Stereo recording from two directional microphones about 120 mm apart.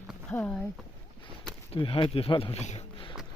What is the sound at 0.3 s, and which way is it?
Speech, 15° left (ahead or behind).